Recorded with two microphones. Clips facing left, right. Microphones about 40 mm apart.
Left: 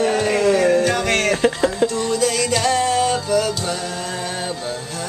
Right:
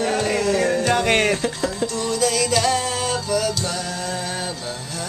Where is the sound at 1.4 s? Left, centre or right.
Left.